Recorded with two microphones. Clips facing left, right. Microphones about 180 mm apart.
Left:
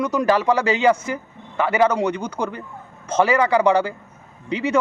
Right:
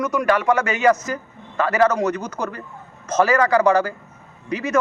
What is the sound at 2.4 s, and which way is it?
A man's voice, 15° left (ahead or behind).